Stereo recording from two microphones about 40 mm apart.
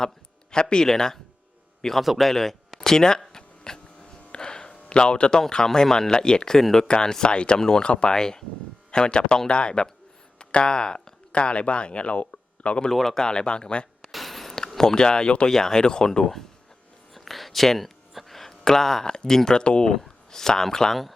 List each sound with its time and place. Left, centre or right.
0.5 s speech: left
2.0 s speech: centre
3.3 s a sound: centre
4.7 s speech: left
6.6 s speech: centre
6.8 s speech: centre
12.9 s speech: centre
13.2 s speech: left
14.0 s a sound: centre
14.5 s speech: centre
17.2 s a sound: centre
19.4 s speech: centre
19.9 s speech: centre